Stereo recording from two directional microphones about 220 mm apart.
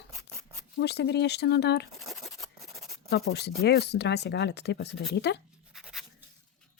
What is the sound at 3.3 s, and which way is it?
Speech, 50° left (ahead or behind).